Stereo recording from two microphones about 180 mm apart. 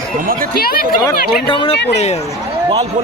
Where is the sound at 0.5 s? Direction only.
55° left (ahead or behind).